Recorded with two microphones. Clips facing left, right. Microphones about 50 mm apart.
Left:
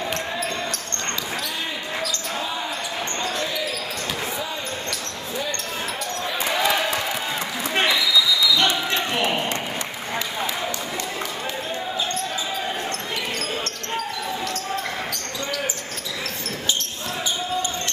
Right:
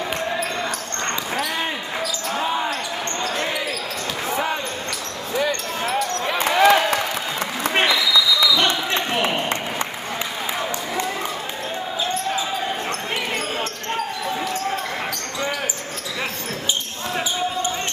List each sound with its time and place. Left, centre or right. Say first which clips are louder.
2.3 s basketball bounce: right 9 dB; right
6.2 s basketball bounce: right 7 dB; right
8.5 s basketball bounce: right 1 dB; centre